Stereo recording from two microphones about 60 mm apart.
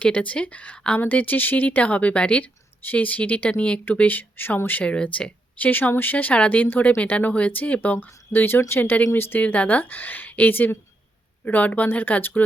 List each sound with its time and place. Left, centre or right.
0.0 s speech: left
4.8 s speech: left
9.4 s speech: left